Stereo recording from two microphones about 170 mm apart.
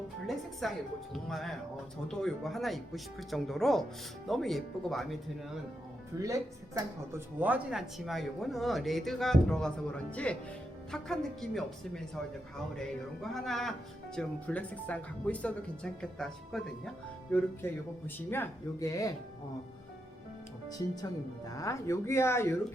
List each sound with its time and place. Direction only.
0.6 s speech: centre (ahead or behind)
6.2 s speech: 20° right (ahead or behind); by 12.2 s centre (ahead or behind)
13.3 s speech: centre (ahead or behind); by 19.1 s 20° left (ahead or behind)
21.5 s speech: 20° left (ahead or behind)